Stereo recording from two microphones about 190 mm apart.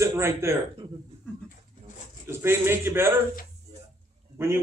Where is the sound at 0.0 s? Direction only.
15° right (ahead or behind).